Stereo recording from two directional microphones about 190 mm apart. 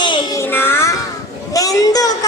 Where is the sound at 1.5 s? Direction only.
20° left (ahead or behind).